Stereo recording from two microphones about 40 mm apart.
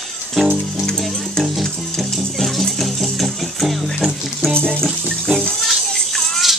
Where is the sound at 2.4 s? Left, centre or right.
Centre.